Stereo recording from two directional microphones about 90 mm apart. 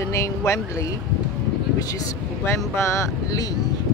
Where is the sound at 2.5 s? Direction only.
30° left (ahead or behind).